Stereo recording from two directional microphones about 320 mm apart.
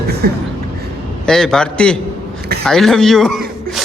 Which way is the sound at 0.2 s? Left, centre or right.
Right.